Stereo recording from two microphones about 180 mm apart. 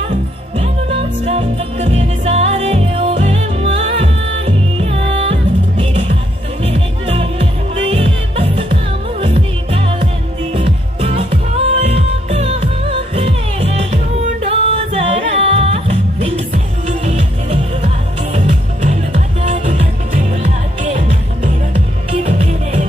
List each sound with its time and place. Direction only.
1.2 s music: 35° right (ahead or behind)
22.2 s music: 35° right (ahead or behind)